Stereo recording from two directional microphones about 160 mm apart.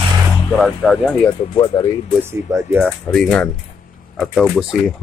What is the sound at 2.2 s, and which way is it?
Speech, 15° right (ahead or behind).